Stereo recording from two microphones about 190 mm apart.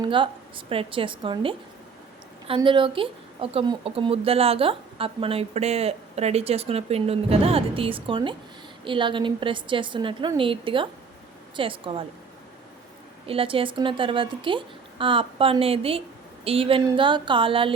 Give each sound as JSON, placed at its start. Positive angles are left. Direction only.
{"t": 0.0, "sound": "speech", "side_deg": -25}
{"t": 2.6, "sound": "a woman's voice", "side_deg": -25}
{"t": 13.2, "sound": "speech", "side_deg": -30}